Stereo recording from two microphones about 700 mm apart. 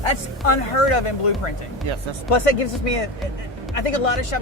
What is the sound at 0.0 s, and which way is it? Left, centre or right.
Speech, left.